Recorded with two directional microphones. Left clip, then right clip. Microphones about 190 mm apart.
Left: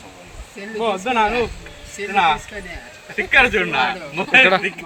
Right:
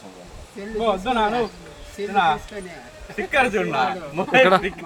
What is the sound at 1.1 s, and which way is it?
Speech, centre (ahead or behind).